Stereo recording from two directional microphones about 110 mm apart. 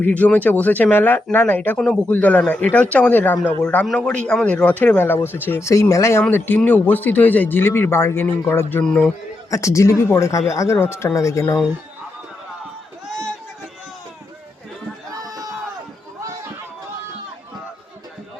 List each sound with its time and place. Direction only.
0.0 s speech: 15° left (ahead or behind)
8.8 s speech: 5° left (ahead or behind)
9.5 s speech: 25° left (ahead or behind)
15.2 s a sound: 35° right (ahead or behind)